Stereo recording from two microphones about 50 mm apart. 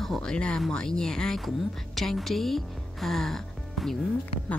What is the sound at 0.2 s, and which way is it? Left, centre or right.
Speech, centre.